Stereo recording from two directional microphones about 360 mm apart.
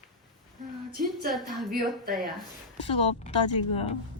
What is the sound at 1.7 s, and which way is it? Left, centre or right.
Speech, right.